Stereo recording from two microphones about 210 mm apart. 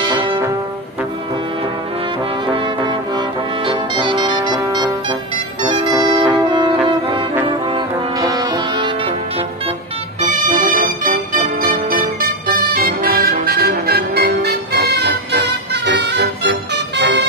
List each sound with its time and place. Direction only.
0.0 s brass instrument: 25° right (ahead or behind)
2.4 s brass instrument: 25° right (ahead or behind)
5.6 s music: 25° right (ahead or behind)
8.2 s music: 20° right (ahead or behind)
10.4 s music: 40° right (ahead or behind); by 17.3 s 55° right (ahead or behind)